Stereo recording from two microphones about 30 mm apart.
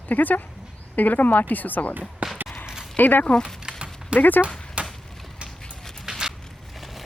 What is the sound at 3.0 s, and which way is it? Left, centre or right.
Speech, left.